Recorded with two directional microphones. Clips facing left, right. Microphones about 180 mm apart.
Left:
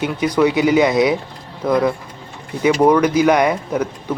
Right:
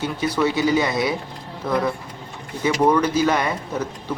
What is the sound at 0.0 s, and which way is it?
Speech, 15° left (ahead or behind).